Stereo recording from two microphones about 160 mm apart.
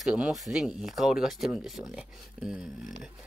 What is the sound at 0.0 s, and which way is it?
Speech, 5° right (ahead or behind).